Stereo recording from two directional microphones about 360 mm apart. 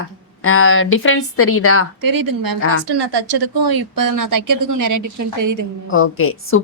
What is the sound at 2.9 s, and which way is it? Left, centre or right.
Speech, right.